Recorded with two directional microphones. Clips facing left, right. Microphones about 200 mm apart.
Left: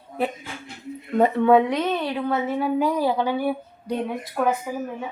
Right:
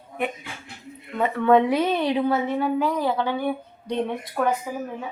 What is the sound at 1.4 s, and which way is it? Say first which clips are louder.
Speech: even; 10° left (ahead or behind).